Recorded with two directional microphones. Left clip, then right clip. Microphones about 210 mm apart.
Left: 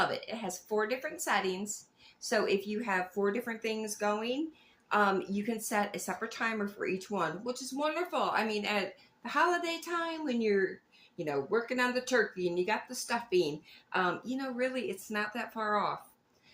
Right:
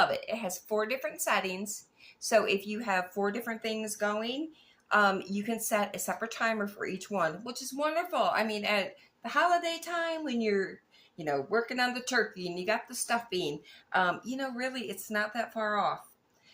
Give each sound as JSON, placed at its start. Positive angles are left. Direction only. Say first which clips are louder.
{"t": 0.1, "sound": "speech", "louder": "right 4 dB", "side_deg": -25}